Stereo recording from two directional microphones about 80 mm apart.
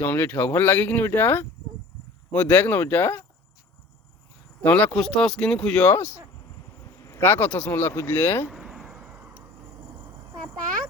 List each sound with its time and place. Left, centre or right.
0.0 s speech: left
4.6 s speech: left
4.9 s speech: centre
6.7 s speech: left
8.4 s a sound: centre